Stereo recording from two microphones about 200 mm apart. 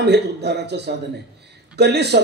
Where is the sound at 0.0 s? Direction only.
55° right (ahead or behind).